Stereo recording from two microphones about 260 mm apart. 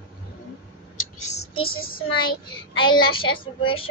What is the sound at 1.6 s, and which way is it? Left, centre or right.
Child singing, left.